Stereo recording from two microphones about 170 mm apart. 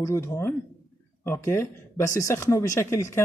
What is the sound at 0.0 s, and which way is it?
A man's voice, 15° left (ahead or behind).